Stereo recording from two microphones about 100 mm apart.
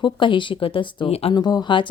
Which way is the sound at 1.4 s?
45° left (ahead or behind).